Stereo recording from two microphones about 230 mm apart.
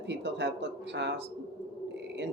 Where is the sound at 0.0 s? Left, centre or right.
Right.